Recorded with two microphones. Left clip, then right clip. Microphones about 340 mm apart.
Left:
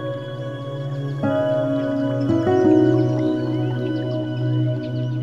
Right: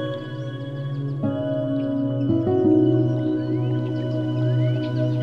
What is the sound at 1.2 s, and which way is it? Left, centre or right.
Music, left.